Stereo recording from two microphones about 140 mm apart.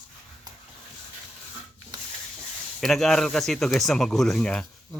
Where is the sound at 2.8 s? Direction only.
Centre (ahead or behind).